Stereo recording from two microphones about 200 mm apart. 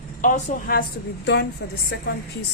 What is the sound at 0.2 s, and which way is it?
A woman's voice, 40° left (ahead or behind).